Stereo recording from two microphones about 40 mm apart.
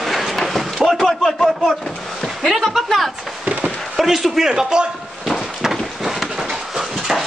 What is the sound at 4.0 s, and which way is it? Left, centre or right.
Speech, centre.